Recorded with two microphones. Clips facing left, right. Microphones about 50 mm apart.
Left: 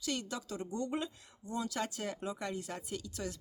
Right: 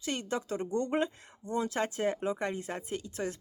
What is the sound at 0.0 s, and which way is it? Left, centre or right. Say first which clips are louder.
Speech: right 4 dB; right.